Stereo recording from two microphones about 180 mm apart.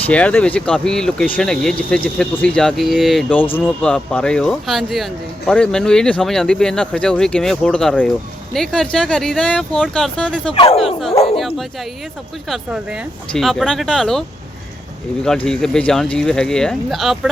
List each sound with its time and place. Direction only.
0.1 s speech: 5° left (ahead or behind)
10.5 s speech: 30° left (ahead or behind)
10.8 s speech: centre (ahead or behind)
11.3 s dog: centre (ahead or behind)
12.5 s speech: centre (ahead or behind)
15.4 s speech: 5° left (ahead or behind)